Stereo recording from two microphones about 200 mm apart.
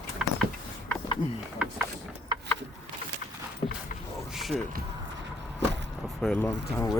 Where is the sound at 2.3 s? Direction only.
25° right (ahead or behind).